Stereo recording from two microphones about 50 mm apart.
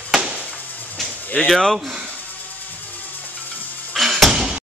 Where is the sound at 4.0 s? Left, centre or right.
Centre.